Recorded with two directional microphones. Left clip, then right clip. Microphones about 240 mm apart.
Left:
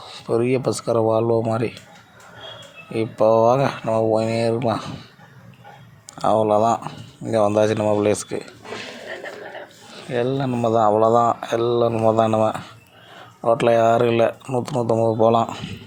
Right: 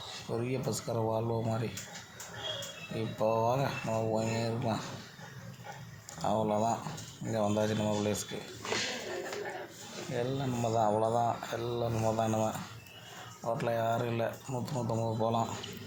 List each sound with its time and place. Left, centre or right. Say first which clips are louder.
0.3 s speech: left 16 dB; left
2.9 s speech: left 14 dB; left
6.1 s speech: left 14 dB; left
10.1 s speech: left 13 dB; centre